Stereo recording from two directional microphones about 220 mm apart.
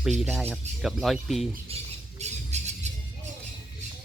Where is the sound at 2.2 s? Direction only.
30° right (ahead or behind).